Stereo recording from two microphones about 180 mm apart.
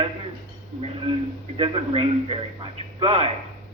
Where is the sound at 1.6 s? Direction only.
35° right (ahead or behind).